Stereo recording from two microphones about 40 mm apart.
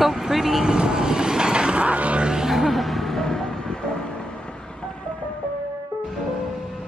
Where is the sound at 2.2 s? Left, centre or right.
Centre.